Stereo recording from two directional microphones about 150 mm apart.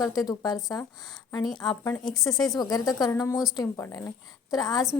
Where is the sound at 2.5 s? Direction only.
25° left (ahead or behind).